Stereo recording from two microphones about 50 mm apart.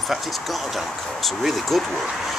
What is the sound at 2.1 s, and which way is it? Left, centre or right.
Speech, centre.